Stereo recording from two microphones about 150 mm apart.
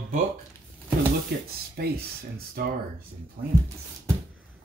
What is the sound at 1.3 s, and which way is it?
Speech, 90° right.